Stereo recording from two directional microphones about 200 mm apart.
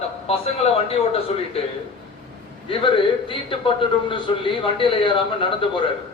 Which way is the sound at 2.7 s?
25° left (ahead or behind).